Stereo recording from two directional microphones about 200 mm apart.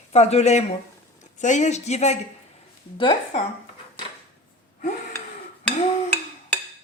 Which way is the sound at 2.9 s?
25° left (ahead or behind).